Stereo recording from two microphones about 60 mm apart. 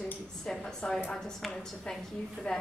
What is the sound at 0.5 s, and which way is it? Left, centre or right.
A woman's voice, centre.